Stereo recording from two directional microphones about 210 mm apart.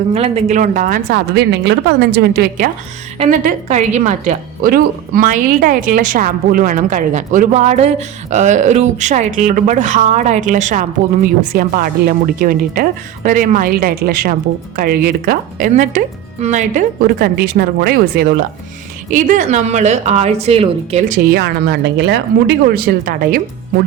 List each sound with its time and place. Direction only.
0.1 s speech: 30° right (ahead or behind); by 2.6 s 50° right (ahead or behind)
3.2 s a woman's voice: 35° right (ahead or behind)